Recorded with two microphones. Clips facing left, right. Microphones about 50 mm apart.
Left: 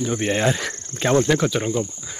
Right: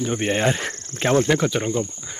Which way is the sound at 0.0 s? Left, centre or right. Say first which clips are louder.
Even; centre.